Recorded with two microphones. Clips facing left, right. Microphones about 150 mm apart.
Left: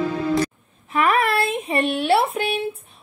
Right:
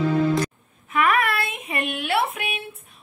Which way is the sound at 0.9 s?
30° left (ahead or behind).